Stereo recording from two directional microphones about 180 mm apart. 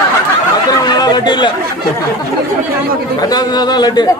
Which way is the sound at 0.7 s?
20° left (ahead or behind).